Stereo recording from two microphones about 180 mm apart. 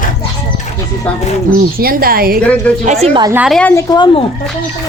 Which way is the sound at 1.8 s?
55° right (ahead or behind).